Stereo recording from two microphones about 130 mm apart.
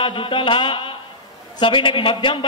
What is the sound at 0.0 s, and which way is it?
A man's voice, 40° left (ahead or behind).